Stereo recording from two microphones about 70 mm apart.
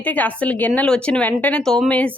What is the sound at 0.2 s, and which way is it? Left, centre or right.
A woman's voice, left.